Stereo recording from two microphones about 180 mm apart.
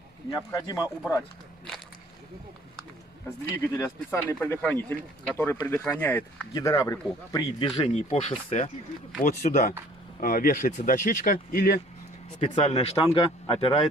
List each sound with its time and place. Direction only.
0.5 s speech: 20° left (ahead or behind)
3.6 s speech: 15° left (ahead or behind); by 11.8 s 60° left (ahead or behind)
12.4 s speech: 35° left (ahead or behind)